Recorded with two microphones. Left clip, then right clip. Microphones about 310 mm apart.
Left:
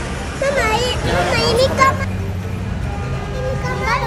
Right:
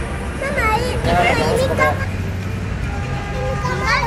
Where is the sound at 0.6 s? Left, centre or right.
Left.